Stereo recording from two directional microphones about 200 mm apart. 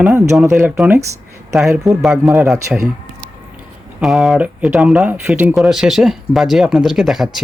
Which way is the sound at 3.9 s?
Centre (ahead or behind).